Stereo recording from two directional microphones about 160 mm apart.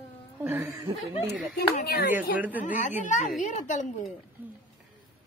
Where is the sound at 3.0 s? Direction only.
50° left (ahead or behind).